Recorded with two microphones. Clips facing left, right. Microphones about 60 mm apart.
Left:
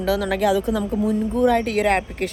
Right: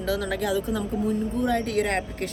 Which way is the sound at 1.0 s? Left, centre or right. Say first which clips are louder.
Left 7 dB; left.